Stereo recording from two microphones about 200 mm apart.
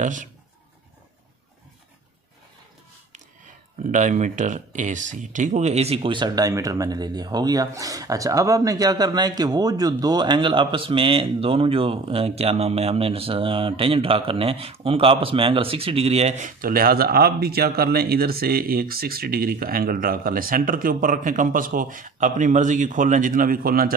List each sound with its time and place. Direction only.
0.0 s speech: 40° right (ahead or behind)
3.8 s speech: 40° right (ahead or behind)